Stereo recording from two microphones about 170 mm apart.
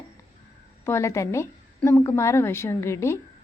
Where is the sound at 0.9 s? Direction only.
15° left (ahead or behind).